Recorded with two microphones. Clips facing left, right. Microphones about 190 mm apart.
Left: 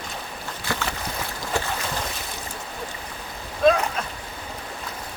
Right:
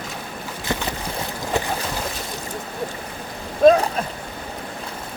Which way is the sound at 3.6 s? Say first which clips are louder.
Right 6 dB; 45° right (ahead or behind).